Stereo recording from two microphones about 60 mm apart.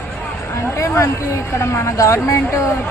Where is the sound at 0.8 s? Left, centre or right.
Left.